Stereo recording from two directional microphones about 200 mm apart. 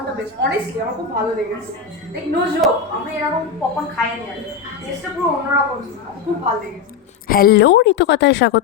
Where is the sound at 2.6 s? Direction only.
Centre (ahead or behind).